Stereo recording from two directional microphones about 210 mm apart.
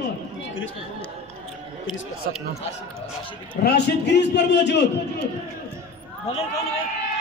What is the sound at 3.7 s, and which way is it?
A man's voice, 55° left (ahead or behind).